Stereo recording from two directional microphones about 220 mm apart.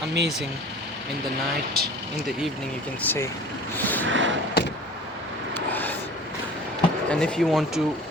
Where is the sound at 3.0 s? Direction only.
10° left (ahead or behind).